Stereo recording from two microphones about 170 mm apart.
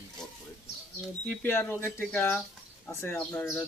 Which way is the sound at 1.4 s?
10° left (ahead or behind).